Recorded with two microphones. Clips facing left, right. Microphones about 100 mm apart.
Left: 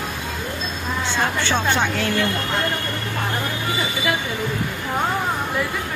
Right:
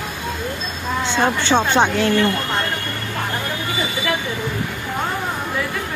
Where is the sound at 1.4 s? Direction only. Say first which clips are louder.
Right 6 dB; 25° right (ahead or behind).